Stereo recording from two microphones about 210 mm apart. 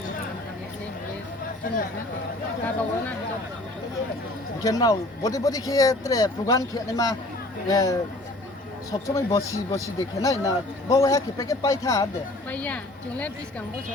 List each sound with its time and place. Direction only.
1.7 s speech: 40° left (ahead or behind)
4.6 s speech: 15° left (ahead or behind)